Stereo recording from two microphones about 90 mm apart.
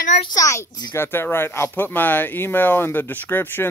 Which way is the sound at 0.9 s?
25° left (ahead or behind).